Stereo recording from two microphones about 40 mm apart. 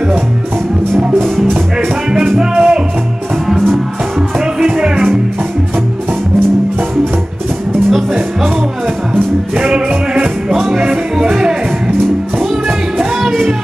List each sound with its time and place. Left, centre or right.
2.1 s music: centre
4.6 s music: centre
9.1 s music: right
10.9 s music: centre